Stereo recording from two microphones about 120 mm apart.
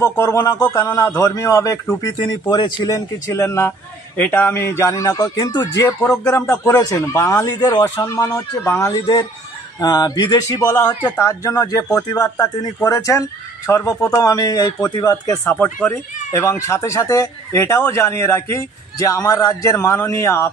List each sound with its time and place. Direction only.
0.0 s speech: 25° left (ahead or behind)
3.3 s speech: 20° left (ahead or behind)
15.4 s speech: 15° left (ahead or behind)